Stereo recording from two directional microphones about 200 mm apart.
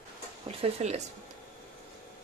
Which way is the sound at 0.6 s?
35° right (ahead or behind).